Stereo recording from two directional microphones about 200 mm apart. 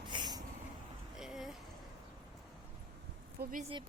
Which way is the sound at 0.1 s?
20° right (ahead or behind).